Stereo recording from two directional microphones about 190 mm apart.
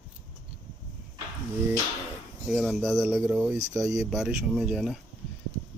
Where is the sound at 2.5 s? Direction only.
Centre (ahead or behind).